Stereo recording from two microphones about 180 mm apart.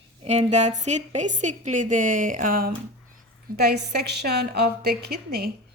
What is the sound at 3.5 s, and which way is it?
Speech, 65° right (ahead or behind).